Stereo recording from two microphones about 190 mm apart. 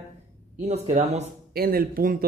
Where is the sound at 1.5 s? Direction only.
50° right (ahead or behind).